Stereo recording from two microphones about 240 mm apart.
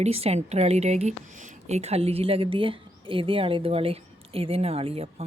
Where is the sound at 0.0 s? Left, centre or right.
Right.